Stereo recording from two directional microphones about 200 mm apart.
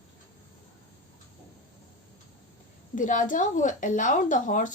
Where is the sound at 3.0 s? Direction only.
40° left (ahead or behind).